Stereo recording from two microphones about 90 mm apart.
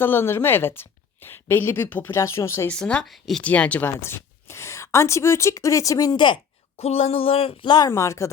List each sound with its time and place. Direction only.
0.0 s a woman's voice: 25° left (ahead or behind)
2.6 s speech: 10° left (ahead or behind)
3.4 s speech: 15° left (ahead or behind); by 6.1 s 40° left (ahead or behind)
6.1 s a woman's voice: 60° left (ahead or behind)
6.9 s speech: 90° left
7.9 s speech: 35° left (ahead or behind)